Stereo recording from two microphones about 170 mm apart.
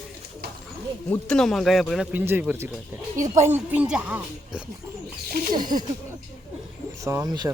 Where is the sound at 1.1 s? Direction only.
5° left (ahead or behind).